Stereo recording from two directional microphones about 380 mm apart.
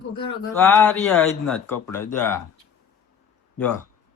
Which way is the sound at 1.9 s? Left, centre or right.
Centre.